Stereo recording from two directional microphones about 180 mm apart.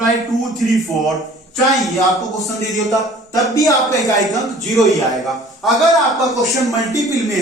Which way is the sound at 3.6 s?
20° left (ahead or behind).